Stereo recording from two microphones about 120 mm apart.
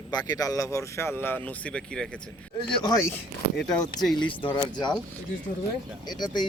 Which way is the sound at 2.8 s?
30° left (ahead or behind).